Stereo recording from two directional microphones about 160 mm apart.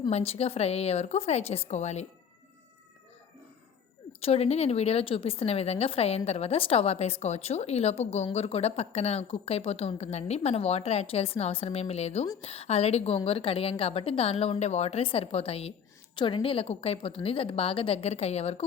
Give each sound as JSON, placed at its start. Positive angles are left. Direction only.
{"t": 0.1, "sound": "a woman's voice", "side_deg": 40}
{"t": 4.2, "sound": "a woman's voice", "side_deg": 40}